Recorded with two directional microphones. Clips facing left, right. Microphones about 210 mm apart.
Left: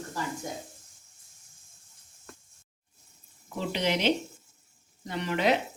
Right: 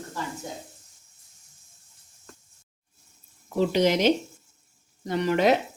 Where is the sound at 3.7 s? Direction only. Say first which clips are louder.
Right 4 dB; 45° right (ahead or behind).